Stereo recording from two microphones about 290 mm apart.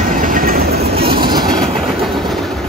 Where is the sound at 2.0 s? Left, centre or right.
Centre.